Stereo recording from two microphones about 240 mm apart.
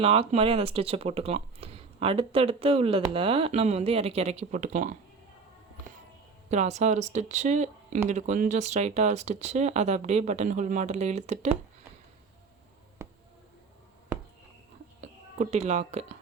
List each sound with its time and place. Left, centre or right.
0.0 s speech: right
6.5 s speech: right
15.0 s speech: right